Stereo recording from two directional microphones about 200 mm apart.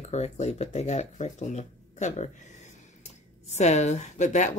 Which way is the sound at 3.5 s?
35° left (ahead or behind).